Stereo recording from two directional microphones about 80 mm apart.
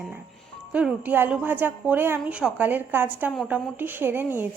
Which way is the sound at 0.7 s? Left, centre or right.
Centre.